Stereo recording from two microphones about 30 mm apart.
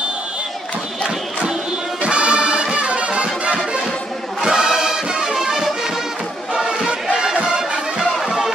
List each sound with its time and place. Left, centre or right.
2.0 s music: right
4.4 s music: right
7.3 s music: right
8.3 s music: centre